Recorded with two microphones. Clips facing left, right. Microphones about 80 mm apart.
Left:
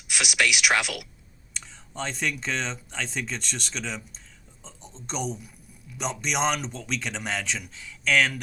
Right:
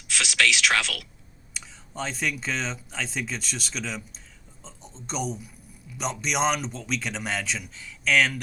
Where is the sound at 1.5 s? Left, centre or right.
Centre.